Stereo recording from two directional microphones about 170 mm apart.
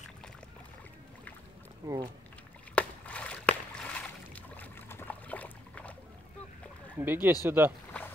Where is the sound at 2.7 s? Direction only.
5° left (ahead or behind).